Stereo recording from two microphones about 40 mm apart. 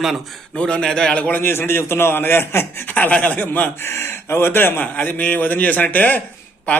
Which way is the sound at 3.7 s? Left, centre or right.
Left.